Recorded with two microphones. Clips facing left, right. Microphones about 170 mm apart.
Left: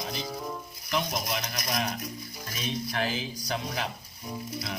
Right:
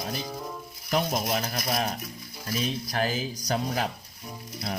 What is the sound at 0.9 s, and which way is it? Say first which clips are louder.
Speech: right 4 dB; 45° right (ahead or behind).